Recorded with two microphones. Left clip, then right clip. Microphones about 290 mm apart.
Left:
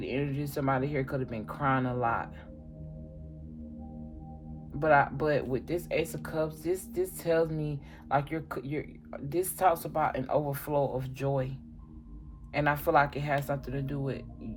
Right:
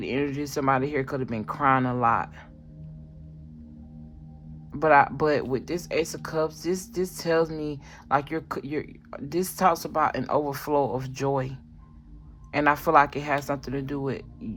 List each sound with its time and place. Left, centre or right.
0.0 s speech: right
4.8 s speech: right